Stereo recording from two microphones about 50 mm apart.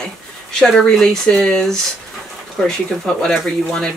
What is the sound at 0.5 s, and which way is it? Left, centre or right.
Speech, centre.